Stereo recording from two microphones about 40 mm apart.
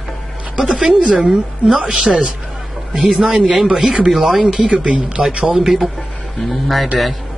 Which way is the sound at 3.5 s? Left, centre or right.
Centre.